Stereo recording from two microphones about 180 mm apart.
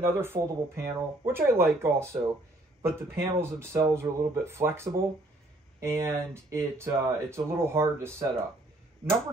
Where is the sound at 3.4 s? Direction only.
15° right (ahead or behind).